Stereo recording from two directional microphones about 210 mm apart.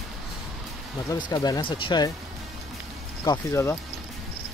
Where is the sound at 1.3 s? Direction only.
20° left (ahead or behind).